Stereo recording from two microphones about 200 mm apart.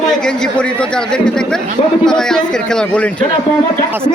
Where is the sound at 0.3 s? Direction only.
5° left (ahead or behind).